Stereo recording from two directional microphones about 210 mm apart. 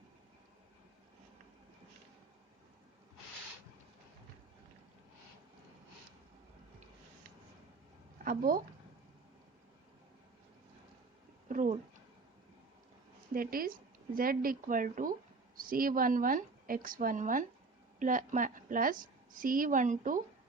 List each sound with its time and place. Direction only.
8.2 s speech: 40° right (ahead or behind)
11.4 s a sound: 40° right (ahead or behind)
13.3 s a woman's voice: 45° right (ahead or behind)